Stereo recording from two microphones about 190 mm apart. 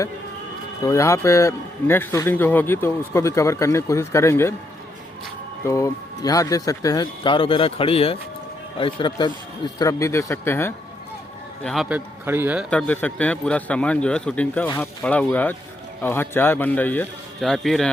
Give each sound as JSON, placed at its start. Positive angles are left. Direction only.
{"t": 0.9, "sound": "a man's voice", "side_deg": 15}
{"t": 5.6, "sound": "a man's voice", "side_deg": 15}
{"t": 11.6, "sound": "a man's voice", "side_deg": 0}
{"t": 12.7, "sound": "a man's voice", "side_deg": 5}